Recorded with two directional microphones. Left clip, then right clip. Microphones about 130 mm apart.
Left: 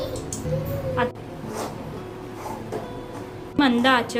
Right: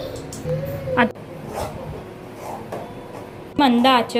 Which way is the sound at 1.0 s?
50° right (ahead or behind).